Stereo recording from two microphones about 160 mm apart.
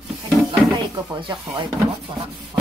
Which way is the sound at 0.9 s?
30° right (ahead or behind).